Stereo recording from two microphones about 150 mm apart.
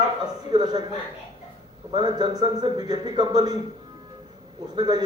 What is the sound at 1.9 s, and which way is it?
Speech, 30° right (ahead or behind).